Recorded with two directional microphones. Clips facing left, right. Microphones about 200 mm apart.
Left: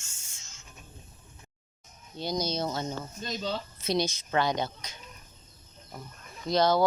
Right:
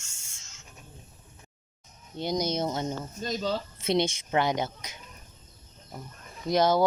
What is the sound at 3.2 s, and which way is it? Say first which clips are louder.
Speech: right 4 dB; 40° right (ahead or behind).